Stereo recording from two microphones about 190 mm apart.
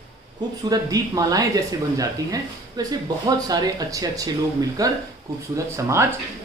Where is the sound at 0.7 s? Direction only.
20° right (ahead or behind).